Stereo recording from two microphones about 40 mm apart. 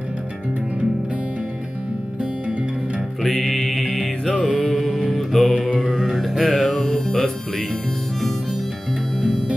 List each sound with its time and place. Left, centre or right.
3.2 s music: centre
5.1 s music: centre
6.6 s music: left
9.2 s music: centre